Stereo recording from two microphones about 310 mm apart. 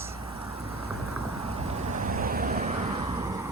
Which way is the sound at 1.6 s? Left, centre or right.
Right.